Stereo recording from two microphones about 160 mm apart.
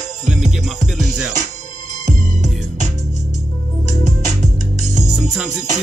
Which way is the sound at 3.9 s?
50° right (ahead or behind).